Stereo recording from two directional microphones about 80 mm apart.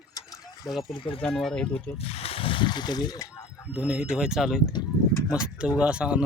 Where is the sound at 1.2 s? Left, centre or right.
Centre.